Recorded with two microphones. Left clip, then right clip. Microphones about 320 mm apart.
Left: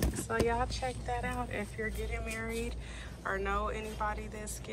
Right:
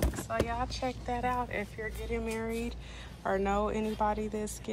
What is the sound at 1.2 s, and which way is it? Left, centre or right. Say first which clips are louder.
Speech: right 5 dB; centre.